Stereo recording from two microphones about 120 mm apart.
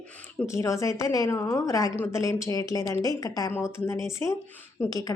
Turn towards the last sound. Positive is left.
turn(degrees=30)  # may be behind; listen again after turning